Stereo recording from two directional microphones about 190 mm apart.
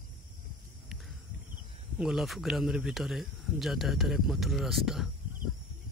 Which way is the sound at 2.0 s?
Centre (ahead or behind).